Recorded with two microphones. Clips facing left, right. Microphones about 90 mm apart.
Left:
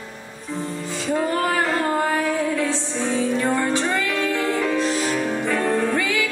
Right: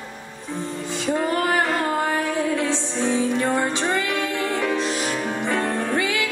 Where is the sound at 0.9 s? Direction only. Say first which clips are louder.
Even; 20° right (ahead or behind).